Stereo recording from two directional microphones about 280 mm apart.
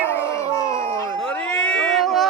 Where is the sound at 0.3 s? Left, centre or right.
Centre.